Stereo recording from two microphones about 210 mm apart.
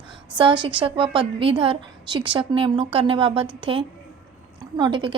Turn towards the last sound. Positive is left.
turn(degrees=-25)  # may be behind; listen again after turning